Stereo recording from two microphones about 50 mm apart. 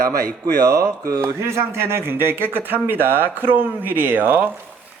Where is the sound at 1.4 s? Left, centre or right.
Right.